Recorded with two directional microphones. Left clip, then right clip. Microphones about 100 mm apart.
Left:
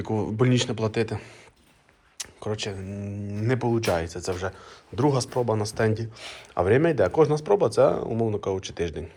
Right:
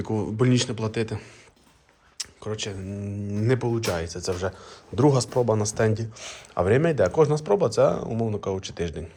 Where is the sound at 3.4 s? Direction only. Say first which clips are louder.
Right 1 dB; 35° right (ahead or behind).